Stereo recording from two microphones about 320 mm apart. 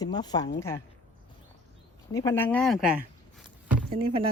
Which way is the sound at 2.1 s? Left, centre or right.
Centre.